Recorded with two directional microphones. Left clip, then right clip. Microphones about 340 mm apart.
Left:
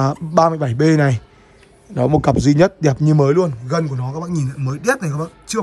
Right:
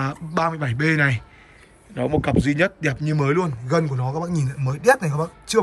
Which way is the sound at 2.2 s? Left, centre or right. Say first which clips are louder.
Left 6 dB; centre.